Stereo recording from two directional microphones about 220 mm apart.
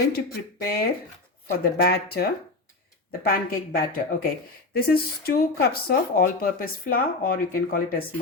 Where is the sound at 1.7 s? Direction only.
45° left (ahead or behind).